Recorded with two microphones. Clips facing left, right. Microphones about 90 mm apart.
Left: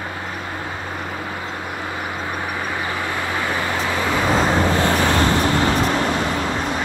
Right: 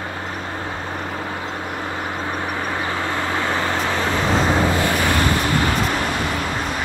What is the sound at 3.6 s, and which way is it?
Vehicle, 20° right (ahead or behind).